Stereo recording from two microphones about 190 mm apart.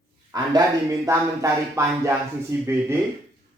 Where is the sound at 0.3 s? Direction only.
20° right (ahead or behind).